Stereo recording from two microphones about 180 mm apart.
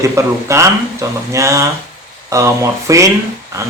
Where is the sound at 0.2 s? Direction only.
15° right (ahead or behind).